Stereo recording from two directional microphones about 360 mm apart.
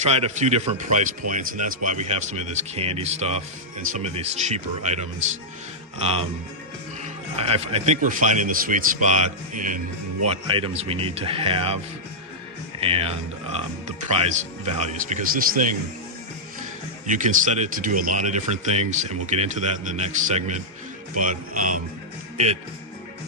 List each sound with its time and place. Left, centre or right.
0.0 s speech: centre
7.0 s speech: centre
12.8 s speech: centre
17.1 s speech: right